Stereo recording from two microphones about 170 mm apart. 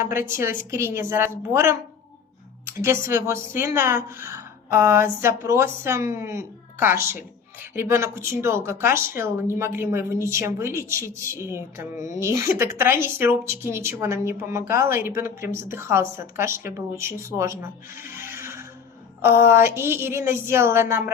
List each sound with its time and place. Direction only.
0.0 s a woman's voice: 15° right (ahead or behind)
18.3 s music: 15° right (ahead or behind)
19.2 s a woman's voice: 15° right (ahead or behind)